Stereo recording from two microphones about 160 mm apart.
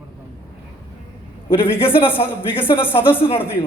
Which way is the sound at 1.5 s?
15° left (ahead or behind).